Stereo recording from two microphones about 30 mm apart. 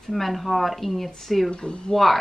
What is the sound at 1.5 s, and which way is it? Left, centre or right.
Speech, left.